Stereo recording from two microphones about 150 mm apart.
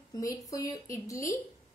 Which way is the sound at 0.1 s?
20° left (ahead or behind).